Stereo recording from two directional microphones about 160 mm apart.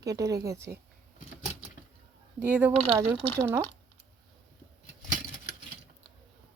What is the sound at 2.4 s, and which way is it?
Speech, 10° right (ahead or behind).